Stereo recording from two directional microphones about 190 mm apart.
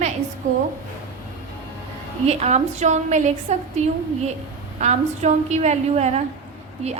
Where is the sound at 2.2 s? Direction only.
35° right (ahead or behind).